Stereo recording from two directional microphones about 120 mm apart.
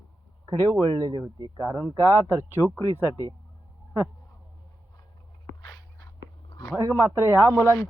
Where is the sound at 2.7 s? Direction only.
30° left (ahead or behind).